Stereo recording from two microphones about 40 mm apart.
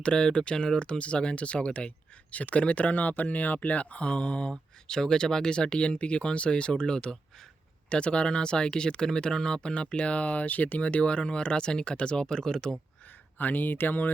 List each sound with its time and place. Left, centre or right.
0.0 s speech: left
4.9 s speech: centre
13.4 s speech: left